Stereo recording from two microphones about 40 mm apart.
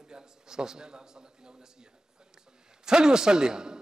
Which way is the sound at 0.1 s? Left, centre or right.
Centre.